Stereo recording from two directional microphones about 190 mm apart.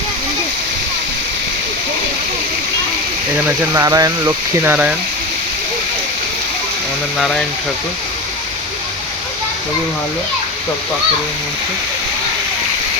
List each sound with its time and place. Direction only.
3.7 s speech: 15° right (ahead or behind)